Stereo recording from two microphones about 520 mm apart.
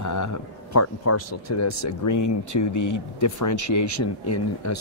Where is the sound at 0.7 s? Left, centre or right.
Left.